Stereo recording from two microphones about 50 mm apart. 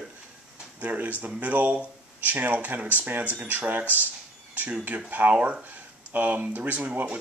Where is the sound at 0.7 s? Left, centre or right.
Right.